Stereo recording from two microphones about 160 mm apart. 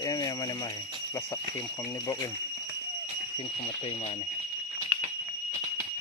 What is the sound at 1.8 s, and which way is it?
Speech, 20° left (ahead or behind).